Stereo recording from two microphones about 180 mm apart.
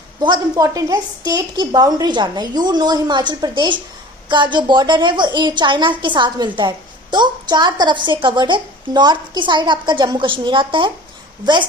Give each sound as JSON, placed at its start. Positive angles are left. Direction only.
{"t": 0.2, "sound": "a woman's voice", "side_deg": -20}